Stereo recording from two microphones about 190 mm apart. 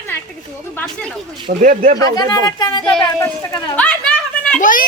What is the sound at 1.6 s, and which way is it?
Speech, 40° right (ahead or behind).